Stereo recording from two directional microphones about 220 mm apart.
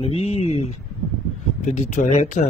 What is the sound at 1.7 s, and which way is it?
Speech, 35° left (ahead or behind).